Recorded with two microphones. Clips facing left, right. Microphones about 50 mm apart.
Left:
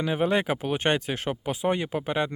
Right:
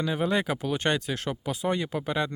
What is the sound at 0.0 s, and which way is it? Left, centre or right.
Speech, left.